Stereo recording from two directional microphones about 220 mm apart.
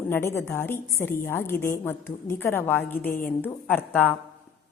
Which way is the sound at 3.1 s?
40° left (ahead or behind).